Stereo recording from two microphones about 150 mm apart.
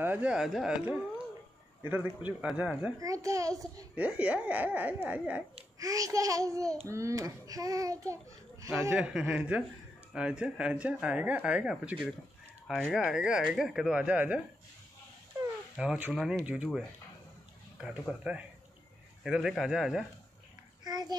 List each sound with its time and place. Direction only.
0.0 s speech: 10° right (ahead or behind)
3.0 s a child's voice: 20° right (ahead or behind)
3.9 s speech: 10° right (ahead or behind)
5.8 s a child's voice: 25° right (ahead or behind)
8.9 s speech: 5° right (ahead or behind)
15.7 s speech: 5° right (ahead or behind)
18.3 s speech: 5° right (ahead or behind)
20.8 s a sound: 25° right (ahead or behind)